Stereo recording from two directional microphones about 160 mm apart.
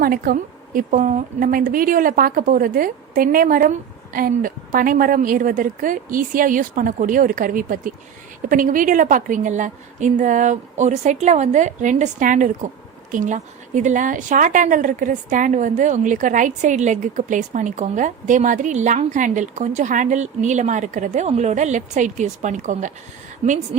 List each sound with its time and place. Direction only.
0.0 s a woman's voice: 65° right (ahead or behind); by 23.6 s 45° right (ahead or behind)